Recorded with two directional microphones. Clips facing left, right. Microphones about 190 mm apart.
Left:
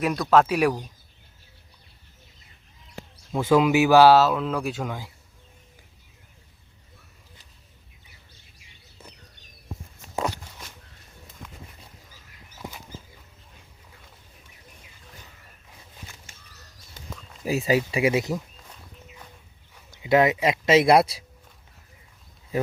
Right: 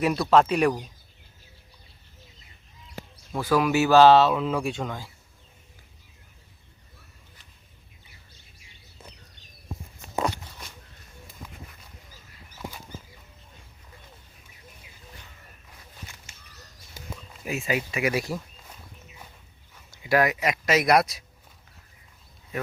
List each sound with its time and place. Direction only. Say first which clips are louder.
0.0 s speech: even; centre (ahead or behind)
3.3 s speech: left 3 dB; 20° left (ahead or behind)
17.0 s a sound: right 1 dB; 10° right (ahead or behind)
17.4 s speech: left 6 dB; 35° left (ahead or behind)
20.0 s speech: left 3 dB; 25° left (ahead or behind)